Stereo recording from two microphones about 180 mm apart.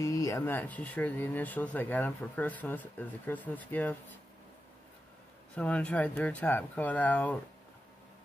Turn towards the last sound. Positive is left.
turn(degrees=10)  # may be behind; listen again after turning